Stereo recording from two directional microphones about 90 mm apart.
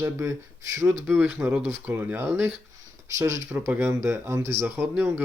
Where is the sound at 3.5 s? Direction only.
20° right (ahead or behind).